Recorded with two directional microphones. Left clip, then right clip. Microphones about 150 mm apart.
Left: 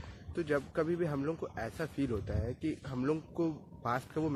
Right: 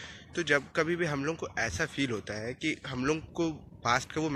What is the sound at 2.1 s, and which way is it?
Speech, 25° right (ahead or behind).